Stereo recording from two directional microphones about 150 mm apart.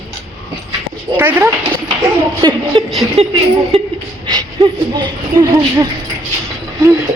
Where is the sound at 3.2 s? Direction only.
40° right (ahead or behind).